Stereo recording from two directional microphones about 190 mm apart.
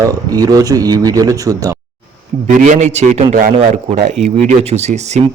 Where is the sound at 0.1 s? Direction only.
20° right (ahead or behind).